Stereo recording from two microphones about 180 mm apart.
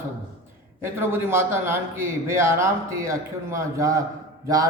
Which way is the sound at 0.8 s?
15° right (ahead or behind).